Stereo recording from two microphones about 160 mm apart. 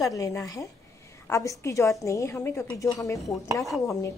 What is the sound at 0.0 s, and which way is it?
Cutlery, 20° left (ahead or behind).